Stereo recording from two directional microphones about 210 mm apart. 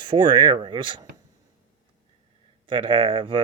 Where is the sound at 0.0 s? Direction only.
20° right (ahead or behind).